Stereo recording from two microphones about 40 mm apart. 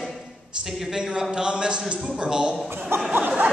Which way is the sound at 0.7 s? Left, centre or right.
Centre.